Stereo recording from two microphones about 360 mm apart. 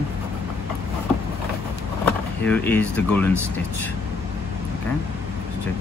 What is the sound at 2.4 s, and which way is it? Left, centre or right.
Speech, centre.